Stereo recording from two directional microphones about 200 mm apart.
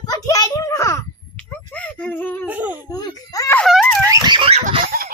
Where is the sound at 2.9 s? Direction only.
15° left (ahead or behind).